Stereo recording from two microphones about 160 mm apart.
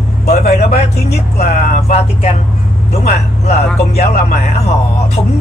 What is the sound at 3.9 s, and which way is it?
Speech, 45° left (ahead or behind).